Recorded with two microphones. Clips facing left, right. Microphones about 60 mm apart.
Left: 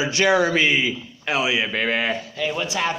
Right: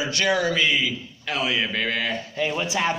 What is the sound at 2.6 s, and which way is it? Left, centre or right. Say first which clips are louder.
Speech: even; centre.